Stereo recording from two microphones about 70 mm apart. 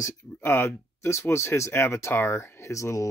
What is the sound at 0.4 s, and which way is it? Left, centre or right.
Speech, left.